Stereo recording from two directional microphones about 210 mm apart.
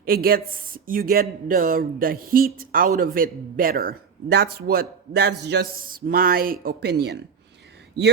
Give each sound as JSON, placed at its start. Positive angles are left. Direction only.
{"t": 0.0, "sound": "speech", "side_deg": -45}